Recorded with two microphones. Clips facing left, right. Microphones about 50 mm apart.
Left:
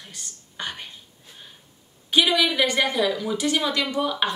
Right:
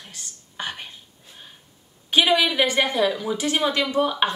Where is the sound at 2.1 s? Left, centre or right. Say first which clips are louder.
Right 1 dB; right.